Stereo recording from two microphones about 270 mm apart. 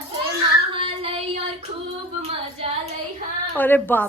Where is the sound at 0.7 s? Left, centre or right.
Right.